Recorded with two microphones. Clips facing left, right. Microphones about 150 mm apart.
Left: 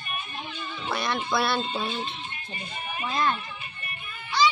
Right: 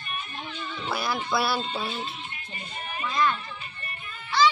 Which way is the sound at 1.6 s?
20° left (ahead or behind).